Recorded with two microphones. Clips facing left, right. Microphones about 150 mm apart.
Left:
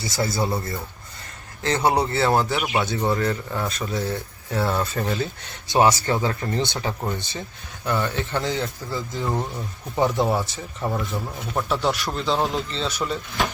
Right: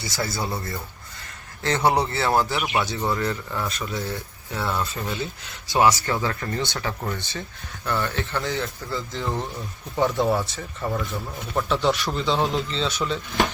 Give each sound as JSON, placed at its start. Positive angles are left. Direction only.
{"t": 0.0, "sound": "speech", "side_deg": 25}
{"t": 4.8, "sound": "speech", "side_deg": 50}
{"t": 5.5, "sound": "speech", "side_deg": 25}
{"t": 11.3, "sound": "speech", "side_deg": 5}